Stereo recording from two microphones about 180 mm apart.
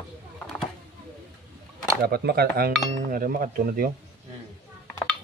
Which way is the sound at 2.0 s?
60° right (ahead or behind).